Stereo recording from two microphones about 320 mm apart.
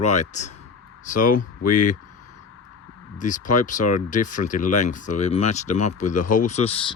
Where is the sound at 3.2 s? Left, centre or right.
Left.